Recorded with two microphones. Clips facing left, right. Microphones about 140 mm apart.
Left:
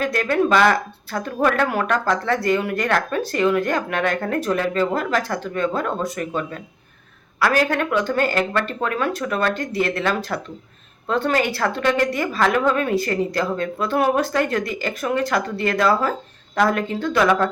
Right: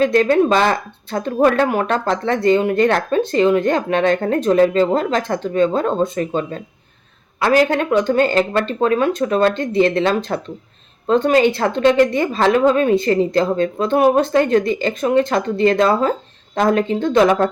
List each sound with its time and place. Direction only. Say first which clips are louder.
0.0 s speech: right 6 dB; 25° right (ahead or behind)